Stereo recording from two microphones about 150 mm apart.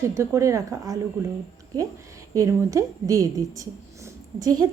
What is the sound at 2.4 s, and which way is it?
A woman's voice, 20° right (ahead or behind).